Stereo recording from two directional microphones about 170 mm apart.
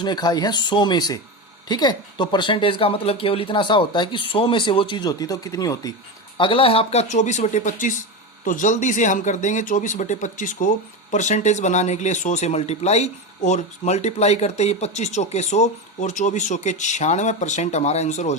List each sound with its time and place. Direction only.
0.0 s speech: 25° left (ahead or behind); by 18.3 s 45° left (ahead or behind)